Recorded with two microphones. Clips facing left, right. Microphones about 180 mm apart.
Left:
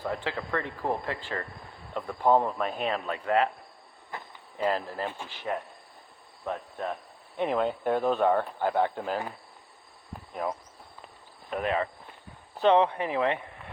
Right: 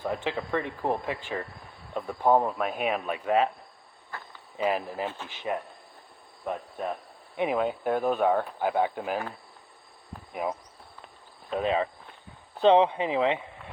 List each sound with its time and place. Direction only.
0.0 s speech: 20° right (ahead or behind)
4.1 s cricket: 20° left (ahead or behind)
4.5 s speech: 15° right (ahead or behind)
5.0 s speech: 15° left (ahead or behind)
6.5 s speech: 10° right (ahead or behind)
10.4 s speech: 15° right (ahead or behind)